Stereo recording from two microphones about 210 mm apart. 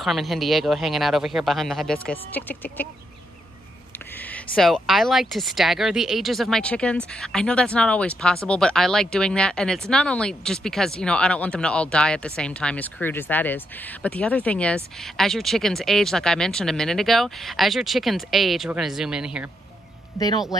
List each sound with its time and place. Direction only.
0.0 s speech: centre (ahead or behind)
4.2 s speech: 5° left (ahead or behind)
20.2 s speech: 15° left (ahead or behind)